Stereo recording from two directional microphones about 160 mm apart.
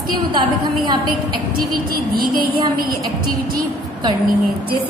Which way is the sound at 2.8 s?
65° right (ahead or behind).